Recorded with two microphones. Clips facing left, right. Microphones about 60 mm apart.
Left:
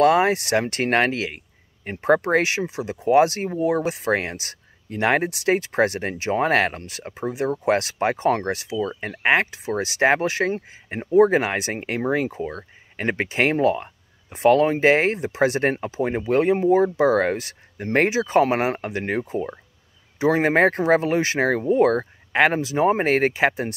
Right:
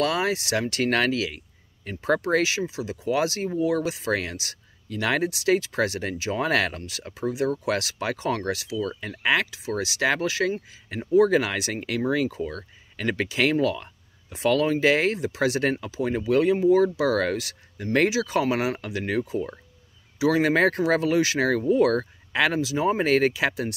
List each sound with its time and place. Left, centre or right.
0.0 s speech: left